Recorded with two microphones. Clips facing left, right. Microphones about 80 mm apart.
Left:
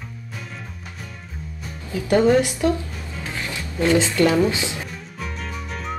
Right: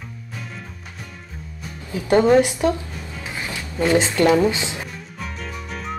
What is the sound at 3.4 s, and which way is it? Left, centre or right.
Music, right.